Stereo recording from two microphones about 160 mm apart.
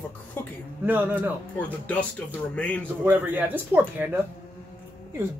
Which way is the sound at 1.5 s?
10° left (ahead or behind).